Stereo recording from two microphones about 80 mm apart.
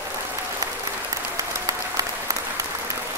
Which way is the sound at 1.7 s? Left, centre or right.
Right.